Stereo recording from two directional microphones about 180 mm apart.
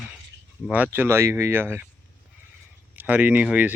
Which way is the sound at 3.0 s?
10° right (ahead or behind).